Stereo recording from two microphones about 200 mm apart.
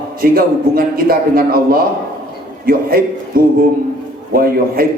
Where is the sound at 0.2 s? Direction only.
45° right (ahead or behind).